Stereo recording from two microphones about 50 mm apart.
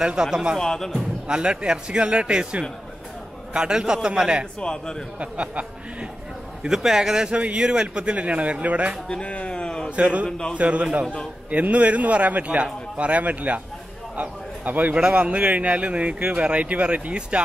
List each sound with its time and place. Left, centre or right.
0.0 s a man's voice: centre
0.6 s a man's voice: centre
0.9 s a man's voice: centre
4.6 s a man's voice: centre
5.2 s a man's voice: right
6.7 s a man's voice: centre
7.3 s a man's voice: right
9.1 s a sound: left
9.8 s a man's voice: right
10.2 s a man's voice: centre
10.5 s a man's voice: right